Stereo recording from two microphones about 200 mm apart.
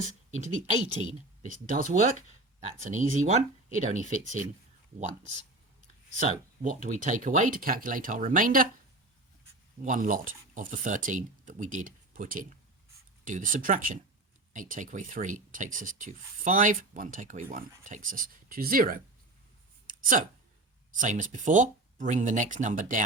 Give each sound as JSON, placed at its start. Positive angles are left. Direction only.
{"t": 0.3, "sound": "speech", "side_deg": -40}
{"t": 9.8, "sound": "speech", "side_deg": -40}
{"t": 19.9, "sound": "a sound", "side_deg": -45}
{"t": 20.9, "sound": "speech", "side_deg": -40}